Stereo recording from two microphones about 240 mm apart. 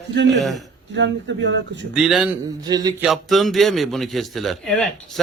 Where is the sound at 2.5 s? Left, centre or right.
Centre.